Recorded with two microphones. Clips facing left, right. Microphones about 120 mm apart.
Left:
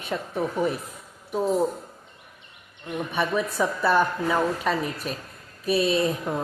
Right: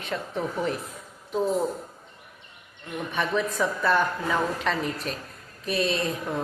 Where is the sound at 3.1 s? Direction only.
10° left (ahead or behind).